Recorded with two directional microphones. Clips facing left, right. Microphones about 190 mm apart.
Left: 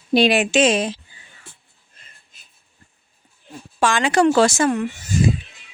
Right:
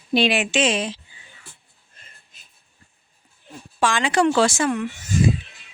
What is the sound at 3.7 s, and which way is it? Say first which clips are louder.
Speech: left 2 dB; 45° left (ahead or behind).